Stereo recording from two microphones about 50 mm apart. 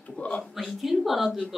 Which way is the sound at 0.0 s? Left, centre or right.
Left.